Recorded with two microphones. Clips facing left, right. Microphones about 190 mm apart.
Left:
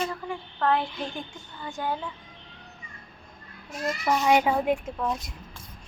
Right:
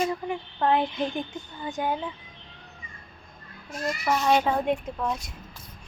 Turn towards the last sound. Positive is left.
turn(degrees=0)  # may be behind; listen again after turning